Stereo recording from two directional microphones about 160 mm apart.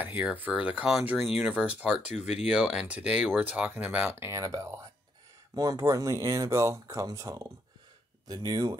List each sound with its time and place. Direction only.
0.0 s speech: 10° right (ahead or behind); by 8.7 s 25° right (ahead or behind)